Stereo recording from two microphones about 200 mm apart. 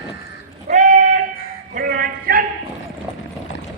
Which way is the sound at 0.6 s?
40° right (ahead or behind).